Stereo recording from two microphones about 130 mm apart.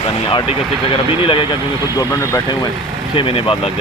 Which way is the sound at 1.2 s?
40° left (ahead or behind).